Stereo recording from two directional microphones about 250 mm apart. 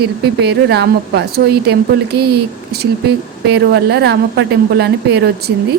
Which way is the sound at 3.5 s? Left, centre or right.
Right.